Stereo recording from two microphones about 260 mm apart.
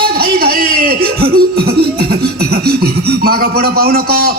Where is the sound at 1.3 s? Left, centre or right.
Right.